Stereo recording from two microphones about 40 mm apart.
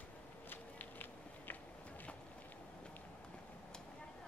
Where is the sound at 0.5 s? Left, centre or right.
Left.